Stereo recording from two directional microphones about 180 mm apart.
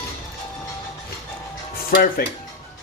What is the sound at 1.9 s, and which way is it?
Speech, 55° left (ahead or behind).